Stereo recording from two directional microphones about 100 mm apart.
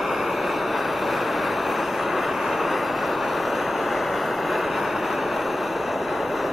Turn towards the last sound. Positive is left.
turn(degrees=0)  # may be behind; listen again after turning